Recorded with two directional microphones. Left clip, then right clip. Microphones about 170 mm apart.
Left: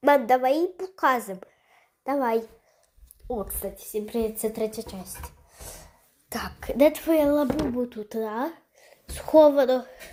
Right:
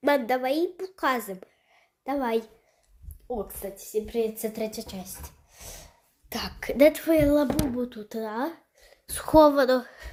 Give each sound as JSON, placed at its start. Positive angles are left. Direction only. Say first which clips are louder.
{"t": 0.0, "sound": "a woman's voice", "louder": "left 4 dB", "side_deg": 5}
{"t": 3.2, "sound": "speech", "louder": "left 2 dB", "side_deg": 20}
{"t": 4.6, "sound": "a sound", "louder": "left 3 dB", "side_deg": 5}
{"t": 6.7, "sound": "speech", "louder": "even", "side_deg": 0}
{"t": 9.0, "sound": "a woman's voice", "louder": "left 1 dB", "side_deg": -10}